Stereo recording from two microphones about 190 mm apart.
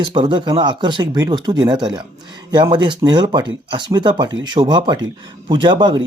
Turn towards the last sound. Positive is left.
turn(degrees=-25)  # may be behind; listen again after turning